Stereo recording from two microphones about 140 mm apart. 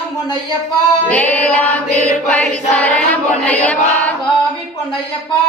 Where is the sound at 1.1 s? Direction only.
10° left (ahead or behind).